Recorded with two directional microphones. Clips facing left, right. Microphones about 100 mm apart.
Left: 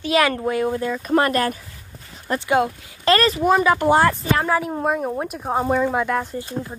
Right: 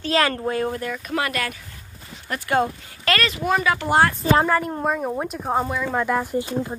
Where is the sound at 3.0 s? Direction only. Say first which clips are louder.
Left 6 dB; 35° left (ahead or behind).